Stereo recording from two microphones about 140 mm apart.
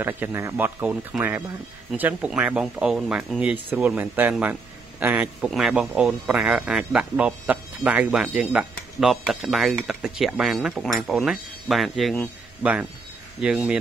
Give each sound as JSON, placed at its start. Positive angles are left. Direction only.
{"t": 0.0, "sound": "speech", "side_deg": -15}
{"t": 0.8, "sound": "speech", "side_deg": -5}
{"t": 13.4, "sound": "speech", "side_deg": -5}